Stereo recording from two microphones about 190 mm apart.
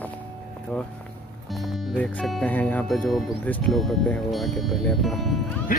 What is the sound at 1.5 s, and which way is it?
Speech, centre (ahead or behind).